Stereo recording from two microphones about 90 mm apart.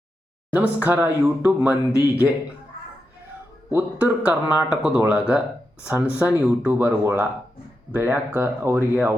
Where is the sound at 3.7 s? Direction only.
20° right (ahead or behind).